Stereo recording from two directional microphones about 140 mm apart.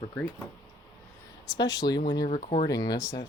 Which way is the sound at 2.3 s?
55° left (ahead or behind).